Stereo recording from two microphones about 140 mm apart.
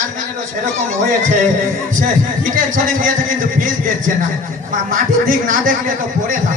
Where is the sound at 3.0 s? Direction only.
75° right (ahead or behind).